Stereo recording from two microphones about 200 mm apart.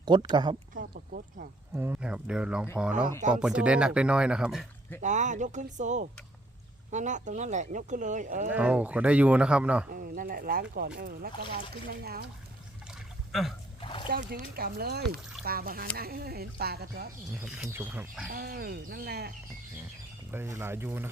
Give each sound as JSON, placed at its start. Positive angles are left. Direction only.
{"t": 0.0, "sound": "speech", "side_deg": -20}
{"t": 0.7, "sound": "a sound", "side_deg": -45}
{"t": 1.7, "sound": "speech", "side_deg": -10}
{"t": 5.0, "sound": "speech", "side_deg": -35}
{"t": 8.4, "sound": "speech", "side_deg": -5}
{"t": 9.9, "sound": "speech", "side_deg": -45}
{"t": 13.8, "sound": "splash", "side_deg": 25}
{"t": 14.1, "sound": "speech", "side_deg": -50}
{"t": 17.4, "sound": "speech", "side_deg": -10}
{"t": 18.3, "sound": "speech", "side_deg": -50}
{"t": 20.3, "sound": "speech", "side_deg": -10}